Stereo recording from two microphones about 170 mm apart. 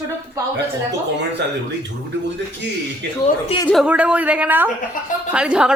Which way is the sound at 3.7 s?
5° right (ahead or behind).